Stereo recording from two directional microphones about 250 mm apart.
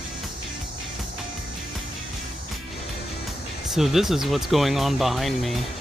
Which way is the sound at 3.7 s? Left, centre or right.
Centre.